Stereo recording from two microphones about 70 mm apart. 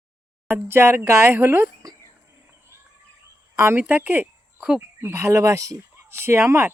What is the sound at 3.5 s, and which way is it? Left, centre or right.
Speech, right.